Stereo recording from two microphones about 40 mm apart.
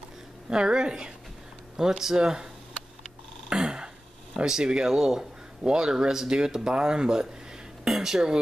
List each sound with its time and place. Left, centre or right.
0.5 s a woman's voice: centre
1.8 s speech: centre
3.4 s a sound: right
4.5 s speech: centre